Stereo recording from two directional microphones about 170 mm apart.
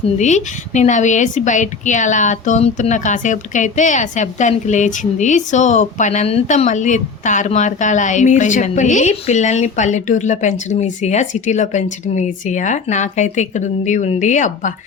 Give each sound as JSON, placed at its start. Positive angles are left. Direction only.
{"t": 0.2, "sound": "a woman's voice", "side_deg": 45}